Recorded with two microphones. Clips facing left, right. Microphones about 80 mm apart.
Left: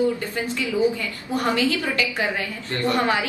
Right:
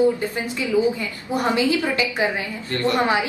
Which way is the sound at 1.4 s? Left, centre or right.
Centre.